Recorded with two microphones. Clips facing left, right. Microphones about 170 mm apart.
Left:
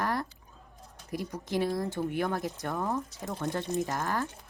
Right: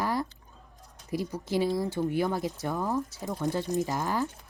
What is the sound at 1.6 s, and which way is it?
Speech, 5° right (ahead or behind).